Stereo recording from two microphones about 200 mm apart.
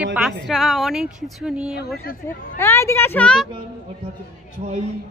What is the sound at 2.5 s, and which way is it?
Speech, 10° left (ahead or behind).